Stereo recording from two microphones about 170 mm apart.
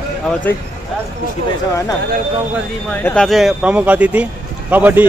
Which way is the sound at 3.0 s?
5° left (ahead or behind).